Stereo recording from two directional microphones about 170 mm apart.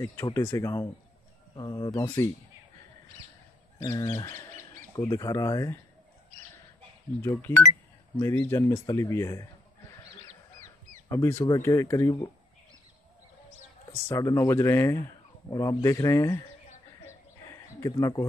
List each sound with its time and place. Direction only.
0.0 s speech: 20° left (ahead or behind)
3.8 s speech: 20° left (ahead or behind)
7.2 s speech: 15° left (ahead or behind)
11.1 s speech: 15° left (ahead or behind)
14.0 s speech: 20° left (ahead or behind)
17.5 s a sound: 20° left (ahead or behind)